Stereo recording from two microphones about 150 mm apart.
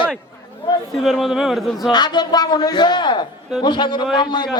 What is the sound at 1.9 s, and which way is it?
A man's voice, 30° left (ahead or behind).